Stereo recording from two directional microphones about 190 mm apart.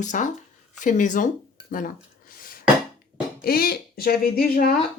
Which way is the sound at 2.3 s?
50° left (ahead or behind).